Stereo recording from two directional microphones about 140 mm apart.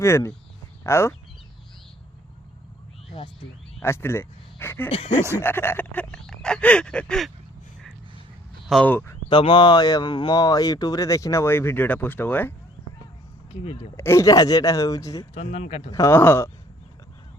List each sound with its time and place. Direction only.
0.0 s speech: 20° left (ahead or behind)
3.8 s speech: 20° left (ahead or behind)
4.9 s speech: 45° left (ahead or behind)
5.4 s a sound: 15° left (ahead or behind)
8.7 s a sound: 10° left (ahead or behind)
9.3 s speech: 35° left (ahead or behind); by 12.5 s 15° left (ahead or behind)
13.9 s speech: 20° left (ahead or behind)
15.4 s speech: 50° left (ahead or behind)
15.9 s speech: 20° left (ahead or behind)